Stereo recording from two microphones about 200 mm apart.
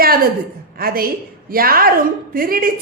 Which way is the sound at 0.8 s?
50° right (ahead or behind).